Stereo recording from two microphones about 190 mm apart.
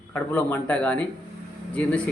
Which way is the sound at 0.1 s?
5° left (ahead or behind).